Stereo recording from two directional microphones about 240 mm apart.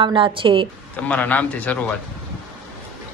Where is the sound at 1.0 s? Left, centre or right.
Centre.